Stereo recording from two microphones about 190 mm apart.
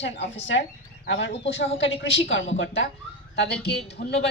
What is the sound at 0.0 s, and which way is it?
Speech, 70° left (ahead or behind).